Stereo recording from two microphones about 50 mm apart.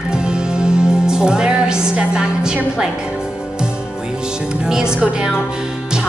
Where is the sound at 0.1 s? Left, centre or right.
Centre.